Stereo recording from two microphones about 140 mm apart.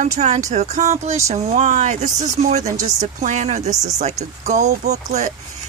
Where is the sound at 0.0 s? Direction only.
60° right (ahead or behind).